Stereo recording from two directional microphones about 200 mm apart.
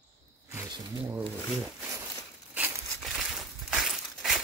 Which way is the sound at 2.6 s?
Centre (ahead or behind).